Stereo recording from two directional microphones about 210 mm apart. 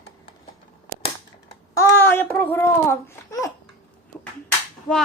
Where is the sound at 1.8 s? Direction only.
10° left (ahead or behind).